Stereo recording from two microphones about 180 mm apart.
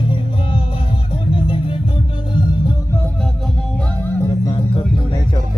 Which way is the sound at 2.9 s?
10° left (ahead or behind).